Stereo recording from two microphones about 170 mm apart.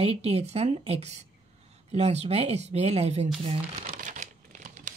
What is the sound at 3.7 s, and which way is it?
Crumpling, 45° right (ahead or behind).